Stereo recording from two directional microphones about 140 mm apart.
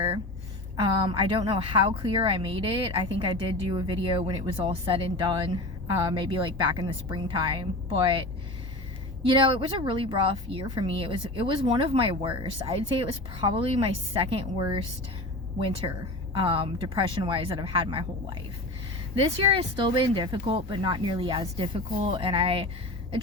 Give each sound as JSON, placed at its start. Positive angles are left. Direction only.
{"t": 0.8, "sound": "a woman's voice", "side_deg": -35}
{"t": 16.4, "sound": "a woman's voice", "side_deg": -40}
{"t": 19.4, "sound": "a woman's voice", "side_deg": -40}